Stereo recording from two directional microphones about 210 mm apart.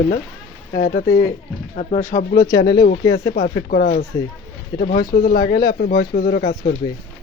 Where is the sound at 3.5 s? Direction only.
45° left (ahead or behind).